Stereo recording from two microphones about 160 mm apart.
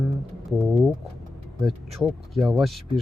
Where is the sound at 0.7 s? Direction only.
5° right (ahead or behind).